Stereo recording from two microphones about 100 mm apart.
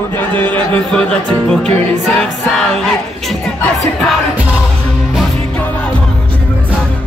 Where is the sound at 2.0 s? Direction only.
5° left (ahead or behind).